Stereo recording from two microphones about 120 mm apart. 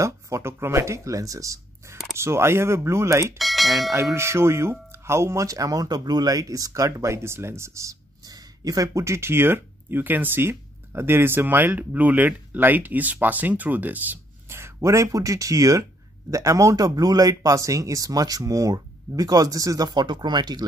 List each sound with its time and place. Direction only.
0.0 s speech: 25° right (ahead or behind)
3.3 s speech: centre (ahead or behind)
3.9 s speech: 25° right (ahead or behind)